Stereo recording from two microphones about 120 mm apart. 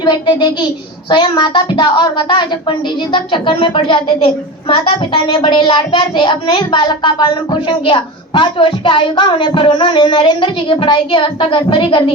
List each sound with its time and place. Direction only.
0.0 s a child's voice: 35° left (ahead or behind)